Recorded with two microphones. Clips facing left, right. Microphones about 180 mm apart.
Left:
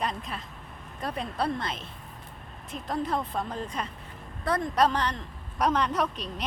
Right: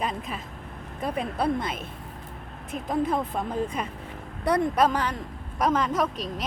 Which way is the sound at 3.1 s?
10° right (ahead or behind).